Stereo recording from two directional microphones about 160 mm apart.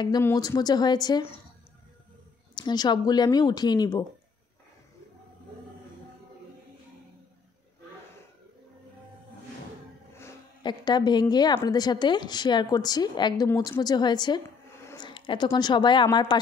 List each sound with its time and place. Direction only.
0.2 s a woman's voice: 20° left (ahead or behind)
2.5 s a woman's voice: 25° left (ahead or behind)
10.6 s a woman's voice: 30° left (ahead or behind)